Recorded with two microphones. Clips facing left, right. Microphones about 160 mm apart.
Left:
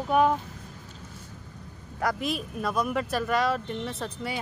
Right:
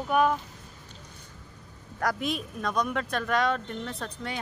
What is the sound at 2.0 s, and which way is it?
Speech, centre (ahead or behind).